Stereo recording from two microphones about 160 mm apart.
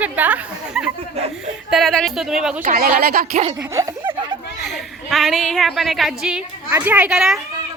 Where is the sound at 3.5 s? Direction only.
15° right (ahead or behind).